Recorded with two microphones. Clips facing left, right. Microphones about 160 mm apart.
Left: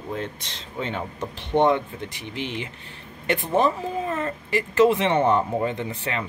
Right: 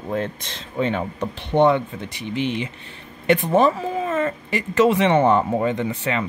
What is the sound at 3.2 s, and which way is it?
Speech, 85° right.